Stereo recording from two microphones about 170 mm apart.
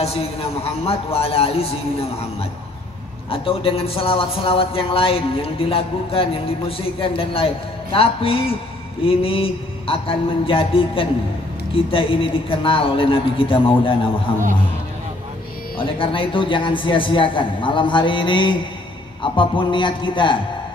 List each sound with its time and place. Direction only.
0.0 s a man's voice: 35° left (ahead or behind)
3.3 s a man's voice: 35° left (ahead or behind)
15.8 s a man's voice: 30° left (ahead or behind)